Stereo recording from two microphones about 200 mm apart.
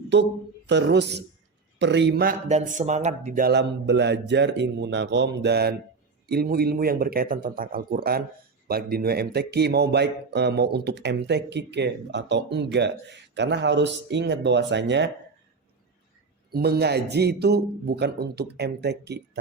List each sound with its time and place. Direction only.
0.1 s a man's voice: 60° right (ahead or behind)
2.5 s a man's voice: 35° right (ahead or behind); by 15.1 s 60° right (ahead or behind)
16.5 s a man's voice: 50° right (ahead or behind)